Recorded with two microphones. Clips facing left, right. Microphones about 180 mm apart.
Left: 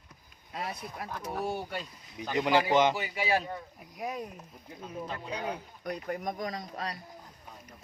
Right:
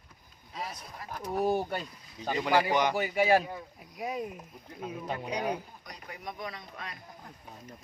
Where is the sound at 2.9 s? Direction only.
50° right (ahead or behind).